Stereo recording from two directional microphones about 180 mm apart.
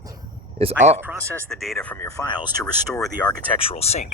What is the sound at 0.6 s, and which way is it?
Speech, 35° right (ahead or behind).